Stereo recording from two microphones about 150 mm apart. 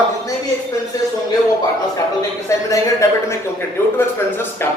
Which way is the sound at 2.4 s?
20° left (ahead or behind).